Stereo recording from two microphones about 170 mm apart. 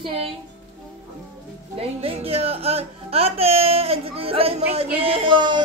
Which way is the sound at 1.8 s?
35° right (ahead or behind).